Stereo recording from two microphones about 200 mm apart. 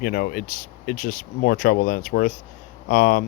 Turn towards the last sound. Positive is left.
turn(degrees=45)  # may be behind; listen again after turning